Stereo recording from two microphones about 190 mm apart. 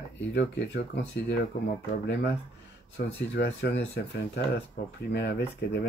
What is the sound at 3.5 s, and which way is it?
Speech, 60° left (ahead or behind).